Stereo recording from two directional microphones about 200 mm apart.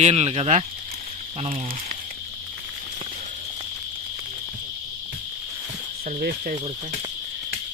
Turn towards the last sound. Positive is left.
turn(degrees=-45)  # may be behind; listen again after turning